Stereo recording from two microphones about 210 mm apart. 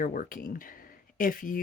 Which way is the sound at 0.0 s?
40° left (ahead or behind).